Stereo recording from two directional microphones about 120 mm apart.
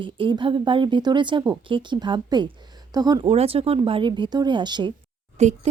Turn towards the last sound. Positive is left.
turn(degrees=-65)  # may be behind; listen again after turning